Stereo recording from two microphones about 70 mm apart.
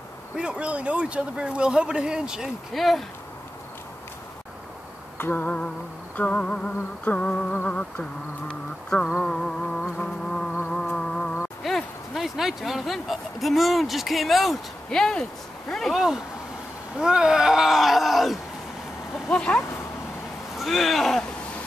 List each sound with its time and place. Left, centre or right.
0.4 s speech: centre
5.1 s a sound: left; by 10.5 s centre
10.7 s music: centre
11.6 s speech: centre
14.9 s a sound: centre
15.7 s speech: centre
19.2 s speech: centre
20.5 s speech: centre